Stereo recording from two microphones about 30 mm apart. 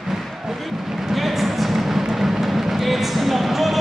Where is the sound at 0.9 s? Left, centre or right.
Centre.